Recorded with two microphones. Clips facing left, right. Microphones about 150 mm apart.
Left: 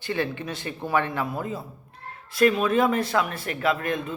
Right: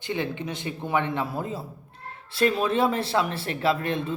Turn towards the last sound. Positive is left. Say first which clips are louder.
# right 1 dB
turn(degrees=-30)  # may be behind; listen again after turning